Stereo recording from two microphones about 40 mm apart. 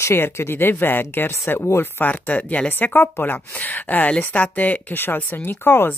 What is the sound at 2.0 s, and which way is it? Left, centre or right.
Speech, left.